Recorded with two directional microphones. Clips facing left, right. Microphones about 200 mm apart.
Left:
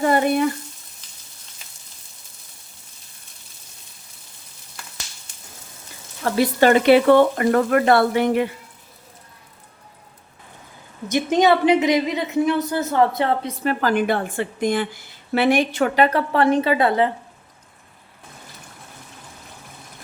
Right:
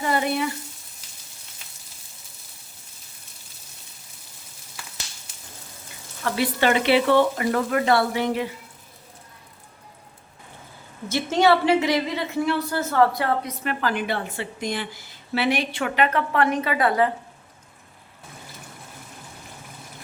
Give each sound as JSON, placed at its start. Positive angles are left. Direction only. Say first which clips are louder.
{"t": 0.0, "sound": "frying", "louder": "left 6 dB", "side_deg": 50}
{"t": 1.0, "sound": "frying", "louder": "right 1 dB", "side_deg": -10}
{"t": 6.3, "sound": "speech", "louder": "left 6 dB", "side_deg": 40}
{"t": 11.1, "sound": "a woman's voice", "louder": "left 2 dB", "side_deg": 15}